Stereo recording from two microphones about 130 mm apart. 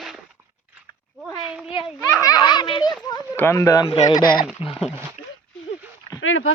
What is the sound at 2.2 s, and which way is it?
Speech, 30° left (ahead or behind).